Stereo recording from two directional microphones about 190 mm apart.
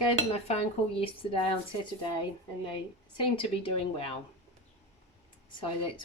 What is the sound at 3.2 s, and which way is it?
Speech, 30° left (ahead or behind).